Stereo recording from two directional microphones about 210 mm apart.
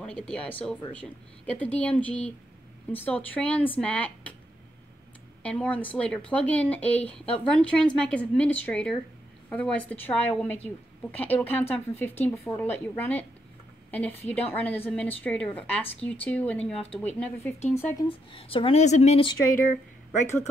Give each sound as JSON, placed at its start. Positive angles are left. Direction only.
{"t": 0.3, "sound": "a woman's voice", "side_deg": 5}
{"t": 5.4, "sound": "a woman's voice", "side_deg": 5}
{"t": 18.0, "sound": "speech", "side_deg": 25}